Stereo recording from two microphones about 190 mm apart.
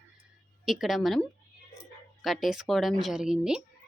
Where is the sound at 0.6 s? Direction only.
Centre (ahead or behind).